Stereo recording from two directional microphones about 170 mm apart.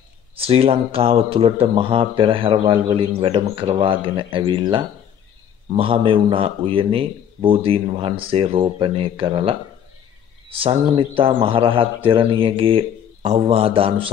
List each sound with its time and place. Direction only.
0.4 s a man's voice: 35° right (ahead or behind)
10.6 s a man's voice: 35° right (ahead or behind)